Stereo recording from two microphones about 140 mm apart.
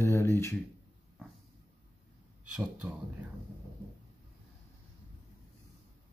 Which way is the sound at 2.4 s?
5° right (ahead or behind).